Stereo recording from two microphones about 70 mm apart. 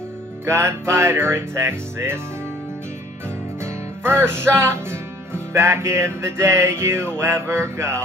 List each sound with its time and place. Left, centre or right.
0.5 s music: right
4.0 s music: right